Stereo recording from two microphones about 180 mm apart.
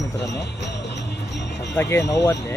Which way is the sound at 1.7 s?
15° left (ahead or behind).